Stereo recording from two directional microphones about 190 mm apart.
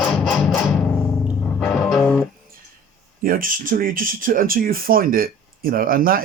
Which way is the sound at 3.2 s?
45° right (ahead or behind).